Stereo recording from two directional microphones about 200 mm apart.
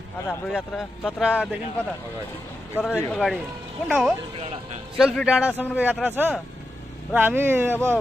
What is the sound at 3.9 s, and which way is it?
Speech, 5° right (ahead or behind).